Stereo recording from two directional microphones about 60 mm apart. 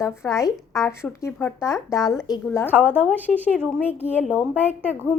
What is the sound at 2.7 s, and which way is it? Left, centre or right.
A woman's voice, right.